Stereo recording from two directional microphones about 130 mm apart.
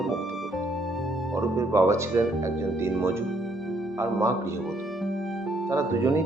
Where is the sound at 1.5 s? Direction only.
20° right (ahead or behind).